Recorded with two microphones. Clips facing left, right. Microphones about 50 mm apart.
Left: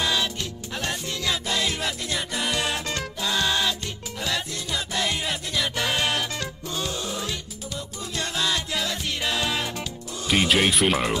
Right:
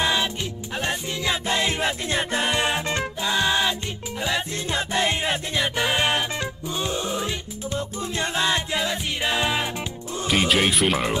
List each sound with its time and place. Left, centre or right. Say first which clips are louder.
0.0 s music: right 2 dB; right
4.6 s music: right 4 dB; right
10.2 s speech: even; centre